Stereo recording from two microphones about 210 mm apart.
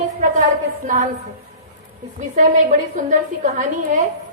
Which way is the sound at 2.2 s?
35° right (ahead or behind).